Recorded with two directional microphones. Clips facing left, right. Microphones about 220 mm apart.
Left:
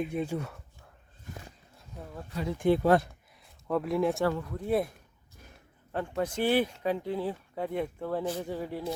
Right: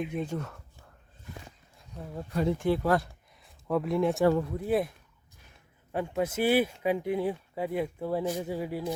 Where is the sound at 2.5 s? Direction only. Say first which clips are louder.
Left 6 dB; 20° left (ahead or behind).